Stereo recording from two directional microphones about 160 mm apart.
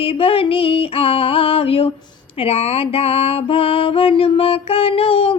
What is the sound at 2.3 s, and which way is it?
Music, 35° left (ahead or behind).